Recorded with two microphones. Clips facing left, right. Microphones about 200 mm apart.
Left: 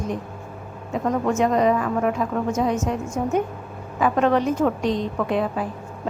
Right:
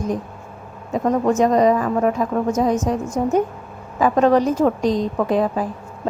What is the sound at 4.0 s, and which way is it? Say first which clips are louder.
A woman's voice: right 4 dB; 40° right (ahead or behind).